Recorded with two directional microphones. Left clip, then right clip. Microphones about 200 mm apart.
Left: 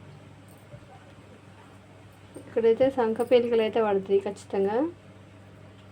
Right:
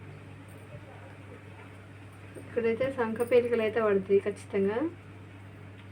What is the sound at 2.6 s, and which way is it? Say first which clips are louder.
Speech: left 8 dB; 55° left (ahead or behind).